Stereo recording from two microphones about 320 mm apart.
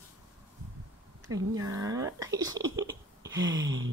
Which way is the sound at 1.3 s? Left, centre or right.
Centre.